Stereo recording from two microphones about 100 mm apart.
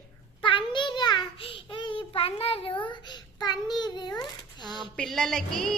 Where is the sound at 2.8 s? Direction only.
50° left (ahead or behind).